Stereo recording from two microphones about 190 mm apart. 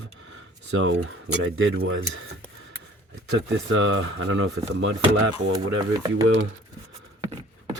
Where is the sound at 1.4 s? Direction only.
85° right.